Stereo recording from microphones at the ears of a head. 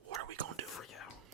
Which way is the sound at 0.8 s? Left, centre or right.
Left.